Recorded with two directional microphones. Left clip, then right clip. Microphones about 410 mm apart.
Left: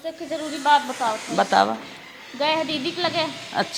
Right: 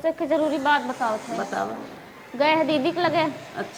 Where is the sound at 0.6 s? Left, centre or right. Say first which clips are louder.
Left 3 dB; centre.